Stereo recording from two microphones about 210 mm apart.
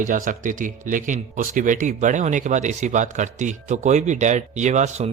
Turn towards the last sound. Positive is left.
turn(degrees=-35)  # may be behind; listen again after turning